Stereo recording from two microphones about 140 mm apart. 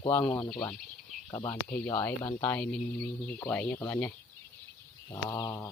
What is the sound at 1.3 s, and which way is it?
Speech, 30° left (ahead or behind).